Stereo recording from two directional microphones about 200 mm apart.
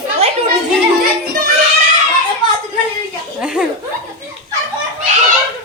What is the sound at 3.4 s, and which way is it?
Chuckle, 5° right (ahead or behind).